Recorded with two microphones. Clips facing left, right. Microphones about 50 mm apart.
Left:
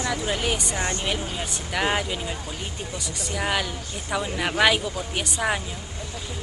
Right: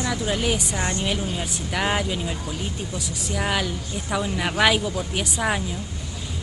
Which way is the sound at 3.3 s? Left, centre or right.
Centre.